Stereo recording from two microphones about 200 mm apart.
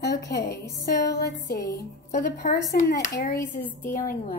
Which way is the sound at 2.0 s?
55° left (ahead or behind).